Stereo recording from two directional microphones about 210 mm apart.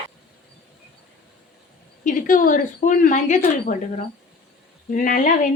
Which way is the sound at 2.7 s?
35° left (ahead or behind).